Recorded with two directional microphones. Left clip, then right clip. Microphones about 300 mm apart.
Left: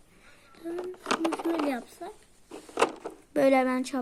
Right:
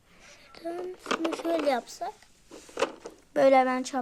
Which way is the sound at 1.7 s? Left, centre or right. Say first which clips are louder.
Right 6 dB; right.